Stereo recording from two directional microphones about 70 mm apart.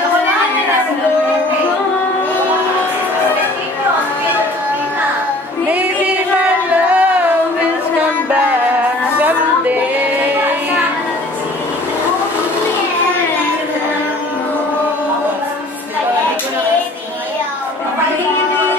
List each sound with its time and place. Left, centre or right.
5.7 s music: centre